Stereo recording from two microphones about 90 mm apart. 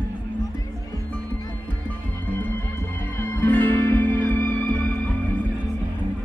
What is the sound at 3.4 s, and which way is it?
Music, 20° left (ahead or behind).